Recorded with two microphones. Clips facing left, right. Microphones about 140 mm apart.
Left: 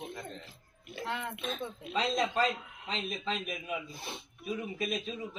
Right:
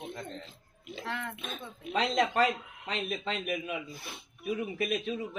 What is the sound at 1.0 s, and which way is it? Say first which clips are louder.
Speech: left 1 dB; 20° left (ahead or behind).